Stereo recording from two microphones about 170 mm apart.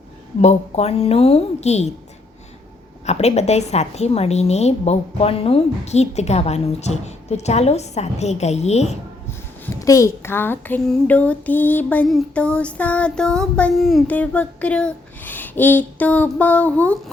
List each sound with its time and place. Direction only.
0.4 s a woman's voice: 35° left (ahead or behind)
3.1 s a woman's voice: 40° left (ahead or behind)
9.8 s child singing: 15° left (ahead or behind)